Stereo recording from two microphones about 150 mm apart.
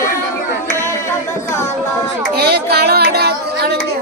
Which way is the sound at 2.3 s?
90° right.